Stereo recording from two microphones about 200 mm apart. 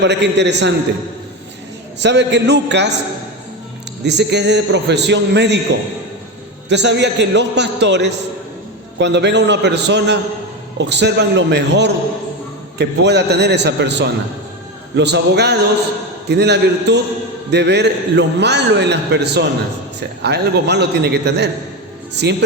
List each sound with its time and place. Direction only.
0.0 s a man's voice: 60° right (ahead or behind)
2.0 s a man's voice: 60° right (ahead or behind)
4.0 s a man's voice: 60° right (ahead or behind)
6.7 s a man's voice: 60° right (ahead or behind)